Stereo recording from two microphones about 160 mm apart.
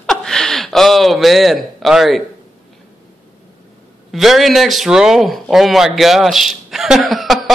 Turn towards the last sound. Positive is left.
turn(degrees=0)  # may be behind; listen again after turning